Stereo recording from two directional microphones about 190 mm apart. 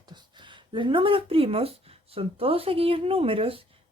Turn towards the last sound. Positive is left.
turn(degrees=-30)  # may be behind; listen again after turning